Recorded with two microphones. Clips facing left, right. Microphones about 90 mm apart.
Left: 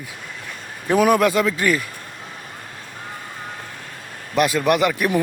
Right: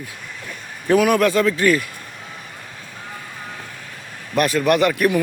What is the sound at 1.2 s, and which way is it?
Speech, 20° left (ahead or behind).